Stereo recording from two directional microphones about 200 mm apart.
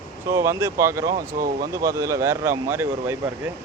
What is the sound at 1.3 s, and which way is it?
Speech, 50° right (ahead or behind).